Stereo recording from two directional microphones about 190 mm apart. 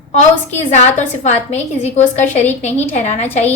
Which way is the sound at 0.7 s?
35° left (ahead or behind).